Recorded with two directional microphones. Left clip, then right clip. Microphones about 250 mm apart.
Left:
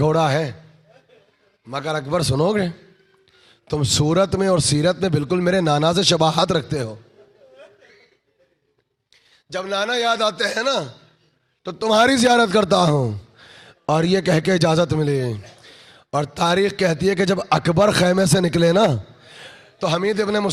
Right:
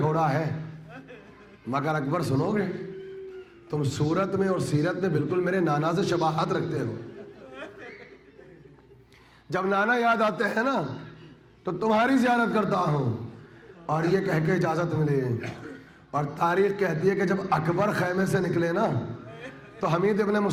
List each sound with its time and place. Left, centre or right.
0.0 s a man's voice: left
1.7 s a man's voice: centre
2.0 s a man's voice: left
3.7 s a man's voice: left
9.5 s a man's voice: centre
11.6 s a man's voice: left
19.8 s a man's voice: left